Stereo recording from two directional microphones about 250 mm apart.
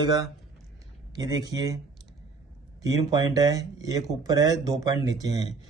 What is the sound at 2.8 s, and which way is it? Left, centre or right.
Speech, centre.